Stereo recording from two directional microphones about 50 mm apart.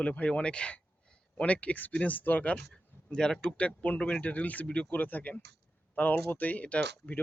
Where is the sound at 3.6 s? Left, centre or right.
Left.